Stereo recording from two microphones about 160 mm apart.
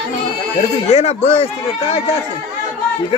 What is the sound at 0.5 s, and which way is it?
Speech, 40° left (ahead or behind).